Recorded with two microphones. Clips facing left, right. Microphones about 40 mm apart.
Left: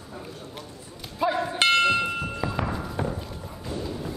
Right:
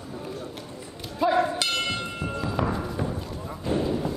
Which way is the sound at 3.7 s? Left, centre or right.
Right.